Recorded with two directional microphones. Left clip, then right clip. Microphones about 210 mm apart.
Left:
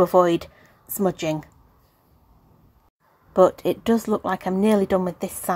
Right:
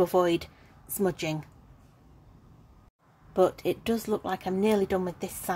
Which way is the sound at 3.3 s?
15° left (ahead or behind).